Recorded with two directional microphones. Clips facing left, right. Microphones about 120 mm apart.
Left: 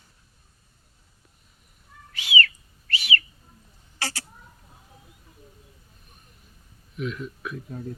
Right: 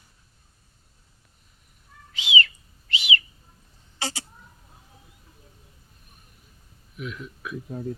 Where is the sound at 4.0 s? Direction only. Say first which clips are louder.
Right 1 dB; 20° right (ahead or behind).